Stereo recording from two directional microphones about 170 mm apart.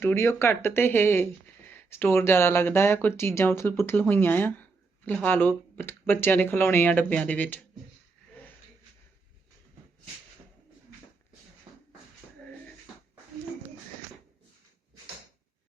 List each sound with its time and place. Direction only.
0.0 s speech: 15° left (ahead or behind)
11.7 s beatboxing: 25° right (ahead or behind)